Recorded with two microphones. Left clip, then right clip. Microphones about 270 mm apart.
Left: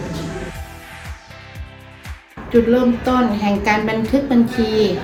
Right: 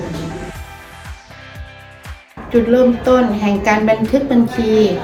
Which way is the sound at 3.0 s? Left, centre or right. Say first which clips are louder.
Right 4 dB; centre.